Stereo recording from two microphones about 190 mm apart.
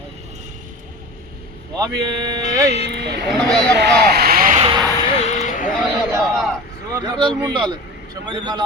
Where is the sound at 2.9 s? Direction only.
60° right (ahead or behind).